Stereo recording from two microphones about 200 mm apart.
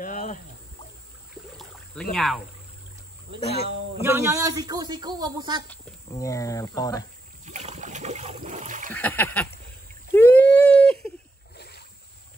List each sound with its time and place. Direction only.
0.0 s a sound: 40° left (ahead or behind)
1.6 s a sound: centre (ahead or behind)
2.1 s speech: centre (ahead or behind)
4.0 s a man's voice: 15° right (ahead or behind)
6.1 s speech: 15° left (ahead or behind)
7.4 s boat: 35° right (ahead or behind)
8.9 s speech: 10° left (ahead or behind)
10.1 s a sound: 10° left (ahead or behind)
11.5 s boat: 55° left (ahead or behind)